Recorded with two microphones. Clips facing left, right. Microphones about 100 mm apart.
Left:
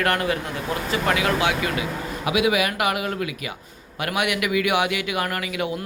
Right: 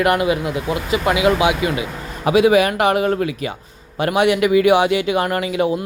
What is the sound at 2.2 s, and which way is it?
A man's voice, 35° right (ahead or behind).